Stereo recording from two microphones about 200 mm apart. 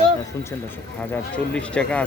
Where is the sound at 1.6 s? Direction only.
5° left (ahead or behind).